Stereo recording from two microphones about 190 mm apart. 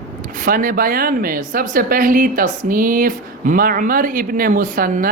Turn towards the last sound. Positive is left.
turn(degrees=-45)  # may be behind; listen again after turning